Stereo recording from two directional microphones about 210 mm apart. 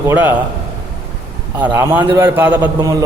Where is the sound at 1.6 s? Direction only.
10° right (ahead or behind).